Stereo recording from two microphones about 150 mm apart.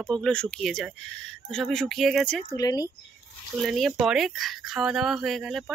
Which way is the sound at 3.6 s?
Centre (ahead or behind).